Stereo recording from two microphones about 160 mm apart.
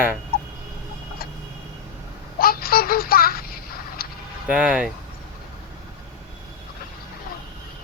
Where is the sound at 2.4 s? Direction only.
65° left (ahead or behind).